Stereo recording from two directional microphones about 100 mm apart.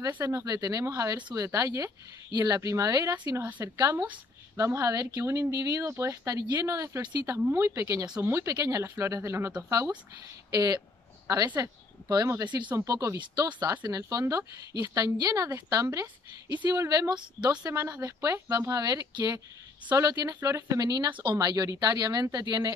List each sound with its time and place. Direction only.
0.2 s speech: 35° right (ahead or behind)
3.9 s speech: 15° right (ahead or behind)
4.6 s speech: 30° right (ahead or behind)
7.0 s a woman's voice: 40° right (ahead or behind)
7.5 s speech: 25° right (ahead or behind)
17.1 s a woman's voice: 45° right (ahead or behind)
17.6 s speech: 30° right (ahead or behind)